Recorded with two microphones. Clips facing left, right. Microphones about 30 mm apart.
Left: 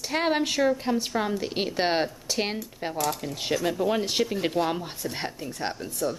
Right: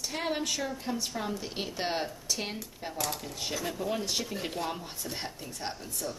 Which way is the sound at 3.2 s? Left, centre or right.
Left.